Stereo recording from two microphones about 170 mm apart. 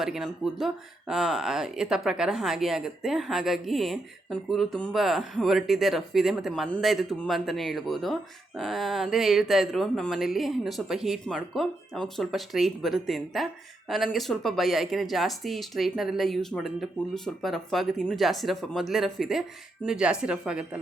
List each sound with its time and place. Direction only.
0.0 s speech: centre (ahead or behind)